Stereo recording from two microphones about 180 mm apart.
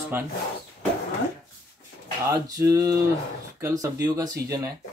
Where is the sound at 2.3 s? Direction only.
20° right (ahead or behind).